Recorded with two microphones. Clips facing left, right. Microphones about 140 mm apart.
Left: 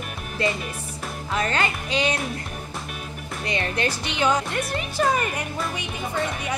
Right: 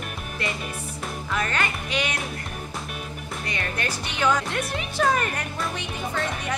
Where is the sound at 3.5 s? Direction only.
25° left (ahead or behind).